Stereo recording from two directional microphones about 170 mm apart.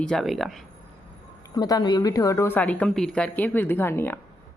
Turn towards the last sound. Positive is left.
turn(degrees=15)  # may be behind; listen again after turning